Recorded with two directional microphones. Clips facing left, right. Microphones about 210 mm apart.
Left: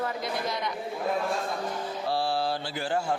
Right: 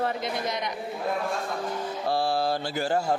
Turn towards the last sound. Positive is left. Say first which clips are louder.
# right 3 dB
turn(degrees=-40)  # may be behind; listen again after turning